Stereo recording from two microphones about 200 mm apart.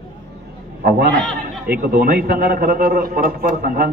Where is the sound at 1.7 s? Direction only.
50° right (ahead or behind).